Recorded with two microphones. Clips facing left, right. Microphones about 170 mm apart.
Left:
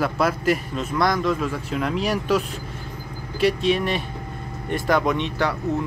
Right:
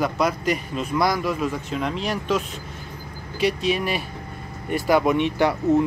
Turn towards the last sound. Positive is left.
turn(degrees=-15)  # may be behind; listen again after turning